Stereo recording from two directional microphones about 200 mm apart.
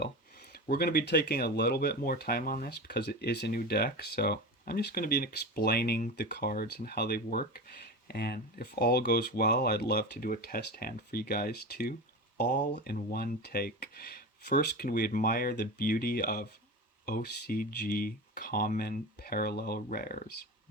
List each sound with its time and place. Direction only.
0.5 s speech: 50° left (ahead or behind)